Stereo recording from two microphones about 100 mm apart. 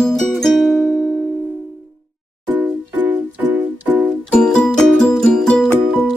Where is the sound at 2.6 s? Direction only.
15° right (ahead or behind).